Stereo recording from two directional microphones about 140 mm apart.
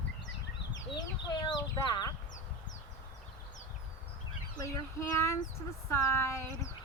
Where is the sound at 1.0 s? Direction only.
30° left (ahead or behind).